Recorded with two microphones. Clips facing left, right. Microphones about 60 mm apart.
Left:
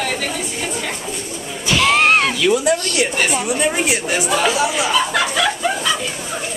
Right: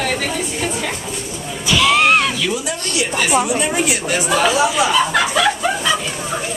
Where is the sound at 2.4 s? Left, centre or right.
Left.